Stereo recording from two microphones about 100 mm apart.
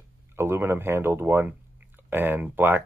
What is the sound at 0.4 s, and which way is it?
Speech, 25° right (ahead or behind).